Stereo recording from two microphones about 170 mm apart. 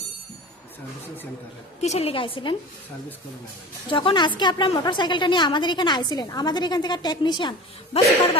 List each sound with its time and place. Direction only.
1.8 s a woman's voice: 40° left (ahead or behind)
3.8 s a woman's voice: 30° left (ahead or behind)